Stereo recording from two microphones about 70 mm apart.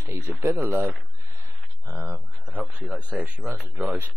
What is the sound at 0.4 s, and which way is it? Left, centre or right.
Speech, right.